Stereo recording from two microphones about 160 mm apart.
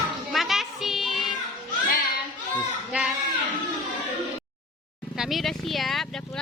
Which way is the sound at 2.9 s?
10° right (ahead or behind).